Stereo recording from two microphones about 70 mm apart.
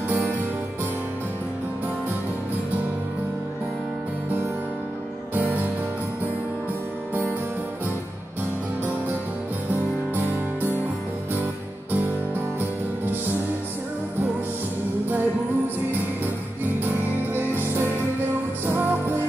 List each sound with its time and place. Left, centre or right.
0.1 s music: right
5.3 s music: right
9.7 s music: right
11.9 s music: right
16.8 s music: right